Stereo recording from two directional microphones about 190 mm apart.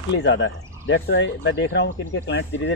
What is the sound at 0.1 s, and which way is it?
Speech, 70° left (ahead or behind).